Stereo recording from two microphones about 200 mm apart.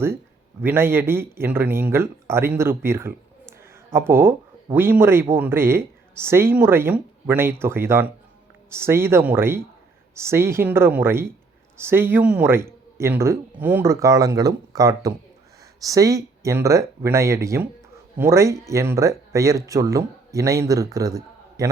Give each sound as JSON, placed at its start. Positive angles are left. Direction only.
{"t": 0.6, "sound": "speech", "side_deg": -10}